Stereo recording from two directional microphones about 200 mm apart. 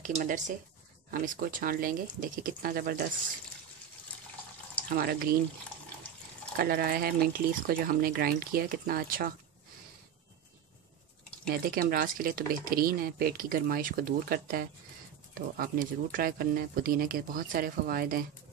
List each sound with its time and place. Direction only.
0.0 s speech: 40° right (ahead or behind)
4.9 s speech: 50° right (ahead or behind)
6.5 s speech: 50° right (ahead or behind)
11.4 s speech: 50° right (ahead or behind)